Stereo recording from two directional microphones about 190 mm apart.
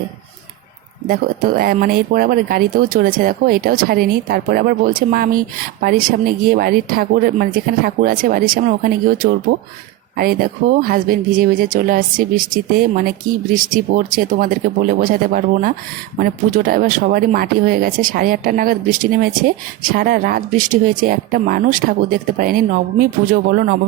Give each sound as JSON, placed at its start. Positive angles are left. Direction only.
{"t": 1.0, "sound": "speech", "side_deg": -50}